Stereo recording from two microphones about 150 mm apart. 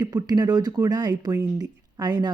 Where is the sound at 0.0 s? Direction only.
25° right (ahead or behind).